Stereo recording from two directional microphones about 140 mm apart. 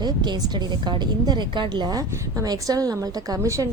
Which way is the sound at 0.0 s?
30° right (ahead or behind).